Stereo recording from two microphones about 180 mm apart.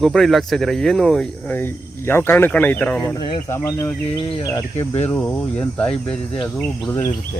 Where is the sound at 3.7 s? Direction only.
15° left (ahead or behind).